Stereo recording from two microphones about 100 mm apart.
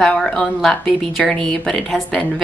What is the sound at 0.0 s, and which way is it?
A woman's voice, 10° left (ahead or behind).